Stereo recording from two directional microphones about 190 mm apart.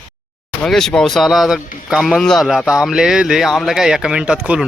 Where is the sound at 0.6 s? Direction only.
Centre (ahead or behind).